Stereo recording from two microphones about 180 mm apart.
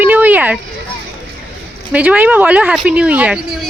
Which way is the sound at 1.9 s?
10° right (ahead or behind).